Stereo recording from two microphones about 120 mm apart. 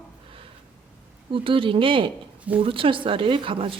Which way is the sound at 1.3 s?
45° right (ahead or behind).